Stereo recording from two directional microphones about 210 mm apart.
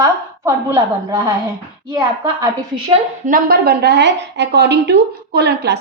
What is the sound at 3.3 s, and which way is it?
Speech, 45° right (ahead or behind).